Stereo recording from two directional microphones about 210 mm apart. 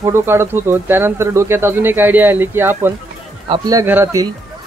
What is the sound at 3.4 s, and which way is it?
Speech, 20° right (ahead or behind).